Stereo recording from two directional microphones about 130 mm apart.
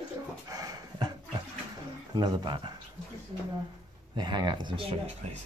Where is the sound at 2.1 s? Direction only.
35° right (ahead or behind).